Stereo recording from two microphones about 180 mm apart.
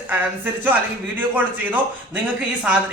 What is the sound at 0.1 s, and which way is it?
Speech, 10° right (ahead or behind).